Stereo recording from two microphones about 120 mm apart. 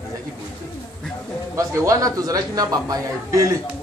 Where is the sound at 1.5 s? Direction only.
30° right (ahead or behind).